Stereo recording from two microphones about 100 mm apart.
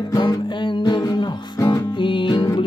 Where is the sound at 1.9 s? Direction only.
55° left (ahead or behind).